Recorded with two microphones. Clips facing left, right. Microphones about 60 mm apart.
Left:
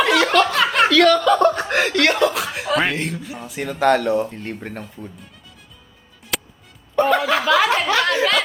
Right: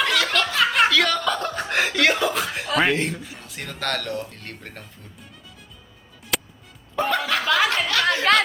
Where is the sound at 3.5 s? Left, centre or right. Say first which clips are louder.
Left 12 dB; centre.